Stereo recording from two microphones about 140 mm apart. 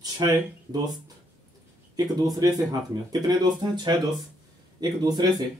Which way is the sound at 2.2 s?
25° right (ahead or behind).